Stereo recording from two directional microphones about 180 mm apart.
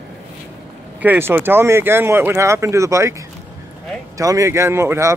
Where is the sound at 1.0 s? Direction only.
10° right (ahead or behind).